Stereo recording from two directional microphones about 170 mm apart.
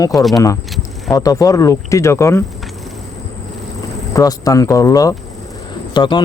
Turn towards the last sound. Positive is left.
turn(degrees=25)  # may be behind; listen again after turning